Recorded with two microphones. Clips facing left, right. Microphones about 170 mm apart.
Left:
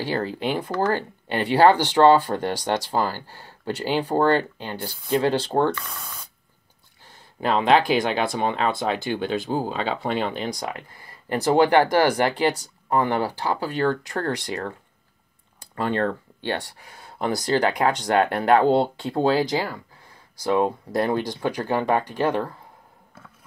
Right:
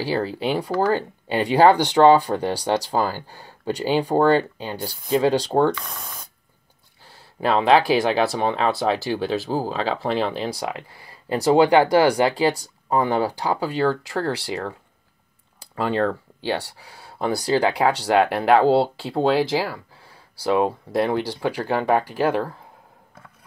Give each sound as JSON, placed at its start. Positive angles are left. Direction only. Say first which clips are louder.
{"t": 0.0, "sound": "speech", "louder": "right 2 dB", "side_deg": -10}
{"t": 7.3, "sound": "speech", "louder": "right 2 dB", "side_deg": -5}
{"t": 15.7, "sound": "speech", "louder": "right 2 dB", "side_deg": -5}